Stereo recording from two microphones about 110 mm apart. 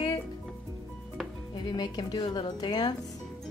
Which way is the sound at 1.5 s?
40° left (ahead or behind).